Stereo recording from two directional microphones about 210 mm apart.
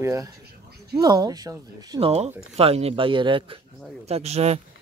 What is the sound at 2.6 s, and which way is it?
Speech, 30° right (ahead or behind).